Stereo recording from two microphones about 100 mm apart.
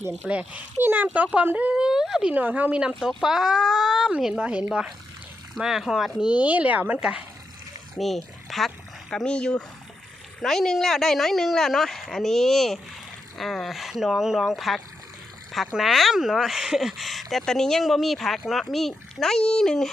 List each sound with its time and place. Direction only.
0.2 s speech: 15° right (ahead or behind)
2.3 s speech: 15° right (ahead or behind)
3.0 s speech: centre (ahead or behind)
7.9 s speech: centre (ahead or behind)